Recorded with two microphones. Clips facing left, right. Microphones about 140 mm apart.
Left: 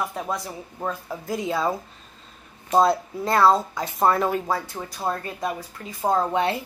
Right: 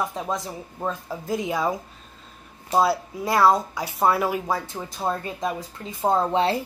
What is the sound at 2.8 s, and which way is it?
Speech, 5° right (ahead or behind).